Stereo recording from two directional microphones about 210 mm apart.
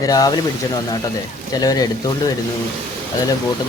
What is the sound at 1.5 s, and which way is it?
Speech, 20° left (ahead or behind).